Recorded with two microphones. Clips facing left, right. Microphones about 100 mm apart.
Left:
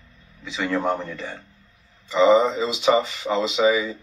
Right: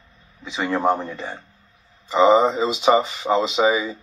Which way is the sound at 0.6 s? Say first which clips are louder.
Right 3 dB; 35° right (ahead or behind).